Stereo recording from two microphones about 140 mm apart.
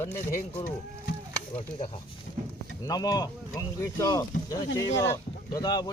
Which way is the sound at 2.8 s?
25° left (ahead or behind).